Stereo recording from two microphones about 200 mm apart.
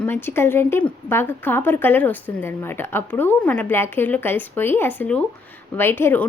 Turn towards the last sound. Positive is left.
turn(degrees=10)  # may be behind; listen again after turning